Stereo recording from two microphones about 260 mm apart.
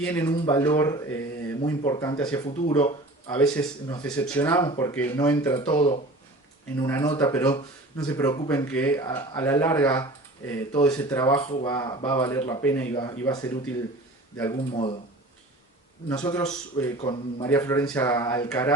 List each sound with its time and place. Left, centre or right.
0.0 s speech: centre
16.0 s speech: centre